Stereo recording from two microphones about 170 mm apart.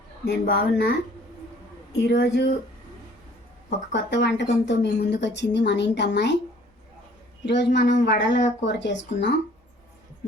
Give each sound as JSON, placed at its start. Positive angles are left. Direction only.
{"t": 0.3, "sound": "speech", "side_deg": 65}
{"t": 2.0, "sound": "a woman's voice", "side_deg": 70}
{"t": 3.9, "sound": "a woman's voice", "side_deg": 80}
{"t": 7.4, "sound": "a woman's voice", "side_deg": 90}